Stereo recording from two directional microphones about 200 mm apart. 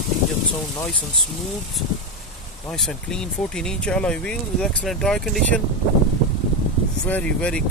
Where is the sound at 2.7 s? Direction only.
Centre (ahead or behind).